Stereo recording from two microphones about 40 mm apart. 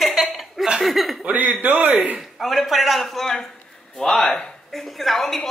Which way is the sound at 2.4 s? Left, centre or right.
Centre.